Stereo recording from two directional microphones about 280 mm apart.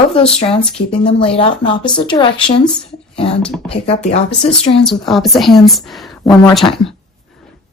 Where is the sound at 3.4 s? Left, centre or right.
Centre.